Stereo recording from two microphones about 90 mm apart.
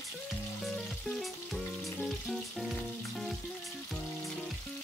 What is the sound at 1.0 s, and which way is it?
Frying, centre (ahead or behind).